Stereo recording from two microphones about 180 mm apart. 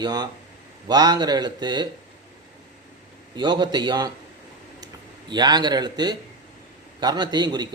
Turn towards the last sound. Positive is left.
turn(degrees=-25)  # may be behind; listen again after turning